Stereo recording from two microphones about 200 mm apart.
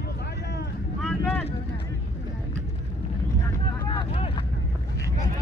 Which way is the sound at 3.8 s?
25° left (ahead or behind).